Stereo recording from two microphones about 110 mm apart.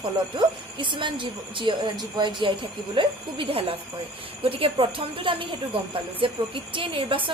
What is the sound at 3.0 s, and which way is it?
A woman's voice, 55° right (ahead or behind).